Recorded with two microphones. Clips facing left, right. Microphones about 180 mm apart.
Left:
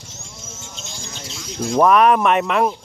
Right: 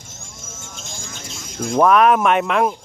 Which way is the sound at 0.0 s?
50° right (ahead or behind).